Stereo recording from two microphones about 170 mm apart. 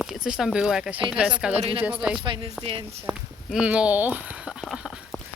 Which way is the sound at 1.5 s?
35° right (ahead or behind).